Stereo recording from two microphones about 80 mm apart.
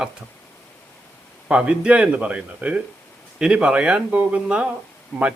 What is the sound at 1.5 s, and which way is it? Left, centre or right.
Speech, centre.